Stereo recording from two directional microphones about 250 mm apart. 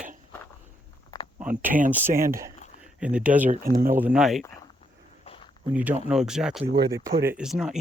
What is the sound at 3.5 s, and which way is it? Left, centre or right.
Speech, right.